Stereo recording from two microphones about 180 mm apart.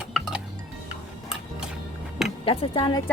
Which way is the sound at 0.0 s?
5° right (ahead or behind).